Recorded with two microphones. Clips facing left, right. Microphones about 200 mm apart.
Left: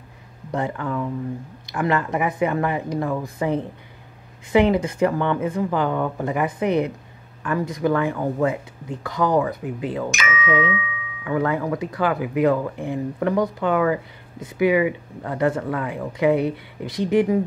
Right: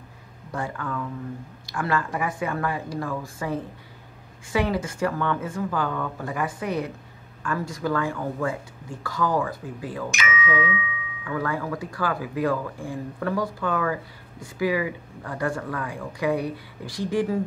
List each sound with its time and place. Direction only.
0.5 s speech: 20° left (ahead or behind)
10.1 s speech: 45° left (ahead or behind)
11.2 s speech: 20° left (ahead or behind)